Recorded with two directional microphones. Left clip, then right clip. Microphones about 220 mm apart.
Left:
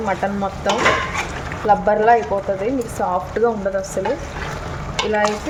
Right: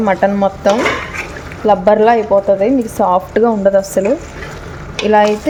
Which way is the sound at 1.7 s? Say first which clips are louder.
Right 4 dB; 40° right (ahead or behind).